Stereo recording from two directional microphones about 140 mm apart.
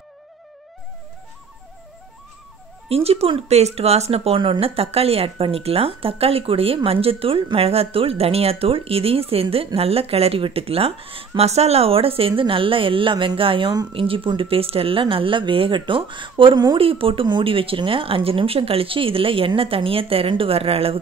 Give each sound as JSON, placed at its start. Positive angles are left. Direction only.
{"t": 2.9, "sound": "speech", "side_deg": -45}